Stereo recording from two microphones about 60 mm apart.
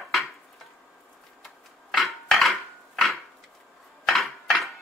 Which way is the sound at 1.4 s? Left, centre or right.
Centre.